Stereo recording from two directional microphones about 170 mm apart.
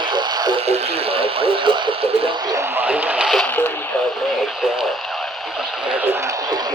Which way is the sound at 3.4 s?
10° left (ahead or behind).